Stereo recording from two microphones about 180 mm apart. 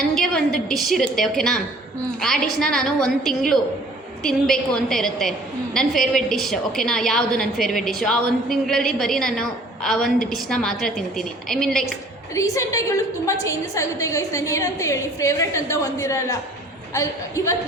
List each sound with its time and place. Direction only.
0.1 s a woman's voice: centre (ahead or behind)
12.3 s a woman's voice: 15° left (ahead or behind)